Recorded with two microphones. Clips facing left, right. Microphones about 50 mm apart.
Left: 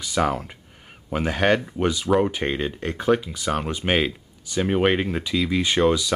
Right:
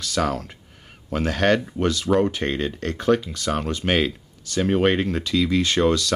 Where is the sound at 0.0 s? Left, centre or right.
Centre.